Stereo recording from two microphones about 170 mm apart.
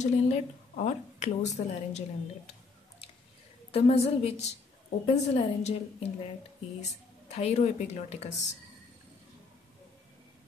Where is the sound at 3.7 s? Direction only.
40° left (ahead or behind).